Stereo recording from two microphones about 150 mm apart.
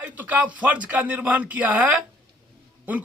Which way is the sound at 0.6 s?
10° right (ahead or behind).